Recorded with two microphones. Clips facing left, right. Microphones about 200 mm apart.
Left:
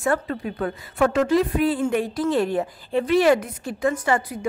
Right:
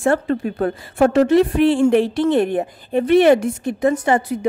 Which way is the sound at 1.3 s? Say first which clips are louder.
Right 6 dB; 75° right (ahead or behind).